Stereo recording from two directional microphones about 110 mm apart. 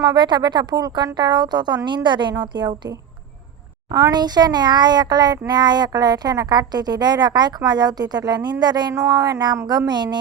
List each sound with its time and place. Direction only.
0.0 s a child's voice: 40° right (ahead or behind)
3.9 s a child's voice: 35° right (ahead or behind)